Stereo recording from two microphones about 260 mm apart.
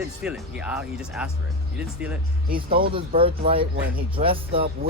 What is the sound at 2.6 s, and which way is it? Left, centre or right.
Speech, right.